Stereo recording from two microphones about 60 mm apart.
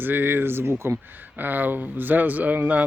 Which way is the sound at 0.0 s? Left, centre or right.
Right.